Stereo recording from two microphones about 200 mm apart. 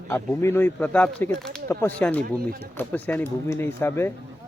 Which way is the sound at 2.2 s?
45° right (ahead or behind).